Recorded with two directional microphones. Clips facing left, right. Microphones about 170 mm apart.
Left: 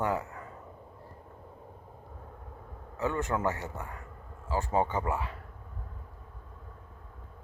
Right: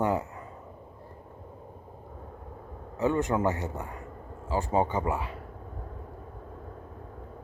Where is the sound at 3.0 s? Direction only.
15° right (ahead or behind).